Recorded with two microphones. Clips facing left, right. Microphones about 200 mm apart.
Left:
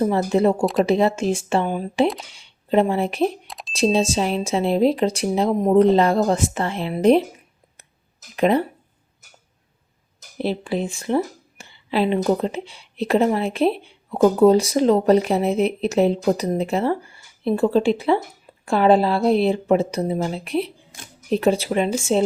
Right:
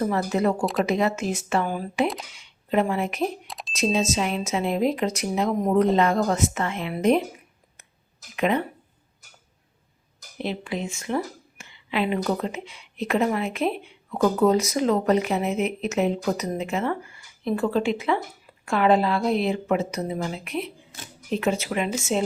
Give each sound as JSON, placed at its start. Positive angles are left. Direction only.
{"t": 0.0, "sound": "speech", "side_deg": 25}
{"t": 0.6, "sound": "speech", "side_deg": 0}
{"t": 0.9, "sound": "speech", "side_deg": 30}
{"t": 3.4, "sound": "a sound", "side_deg": 0}
{"t": 3.7, "sound": "speech", "side_deg": 30}
{"t": 8.4, "sound": "speech", "side_deg": 35}
{"t": 10.3, "sound": "speech", "side_deg": 35}